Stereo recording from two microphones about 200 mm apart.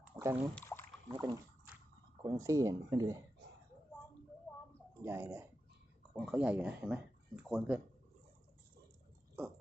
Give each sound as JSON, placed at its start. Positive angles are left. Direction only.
{"t": 0.2, "sound": "speech", "side_deg": -15}
{"t": 0.5, "sound": "a sound", "side_deg": 10}
{"t": 1.0, "sound": "speech", "side_deg": -20}
{"t": 5.0, "sound": "speech", "side_deg": -10}